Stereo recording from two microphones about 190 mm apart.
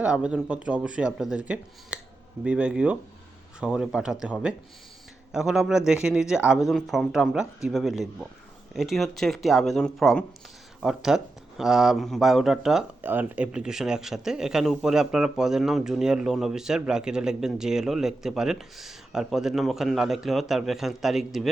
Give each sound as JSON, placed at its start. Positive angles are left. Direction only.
{"t": 0.0, "sound": "speech", "side_deg": -5}
{"t": 1.9, "sound": "a sound", "side_deg": -5}
{"t": 2.4, "sound": "speech", "side_deg": -5}